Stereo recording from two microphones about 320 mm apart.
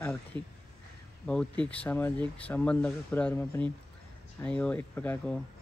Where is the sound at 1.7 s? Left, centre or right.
Centre.